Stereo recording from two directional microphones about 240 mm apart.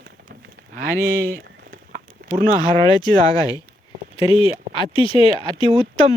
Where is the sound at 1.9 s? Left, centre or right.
Right.